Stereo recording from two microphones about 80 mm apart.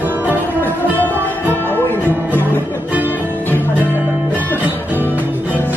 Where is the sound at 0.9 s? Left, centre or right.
Left.